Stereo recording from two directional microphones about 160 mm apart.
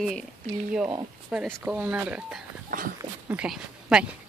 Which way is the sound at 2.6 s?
60° right (ahead or behind).